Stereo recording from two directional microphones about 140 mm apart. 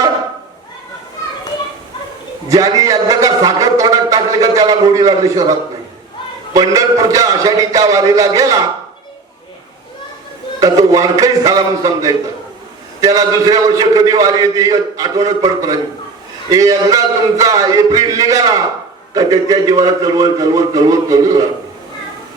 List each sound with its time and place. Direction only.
2.5 s a man's voice: 25° right (ahead or behind)
10.6 s a man's voice: 25° right (ahead or behind)